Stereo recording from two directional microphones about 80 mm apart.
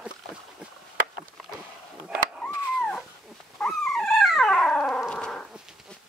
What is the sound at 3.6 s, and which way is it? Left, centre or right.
Dog, centre.